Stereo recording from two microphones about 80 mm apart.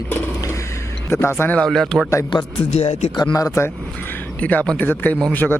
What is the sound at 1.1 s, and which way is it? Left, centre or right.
Speech, left.